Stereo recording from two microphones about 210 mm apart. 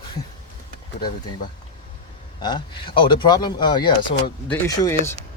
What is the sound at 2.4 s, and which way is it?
Speech, 20° left (ahead or behind).